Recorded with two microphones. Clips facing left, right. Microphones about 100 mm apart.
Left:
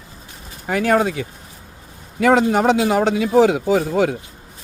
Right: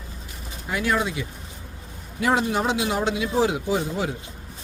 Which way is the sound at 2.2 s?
65° left (ahead or behind).